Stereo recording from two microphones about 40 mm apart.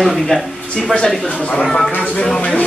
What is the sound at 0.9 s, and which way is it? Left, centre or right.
Speech, left.